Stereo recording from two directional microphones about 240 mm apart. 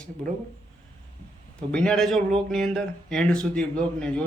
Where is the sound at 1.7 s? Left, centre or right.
Centre.